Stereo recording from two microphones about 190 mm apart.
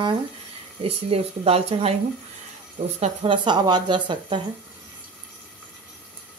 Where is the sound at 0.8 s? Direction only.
30° right (ahead or behind).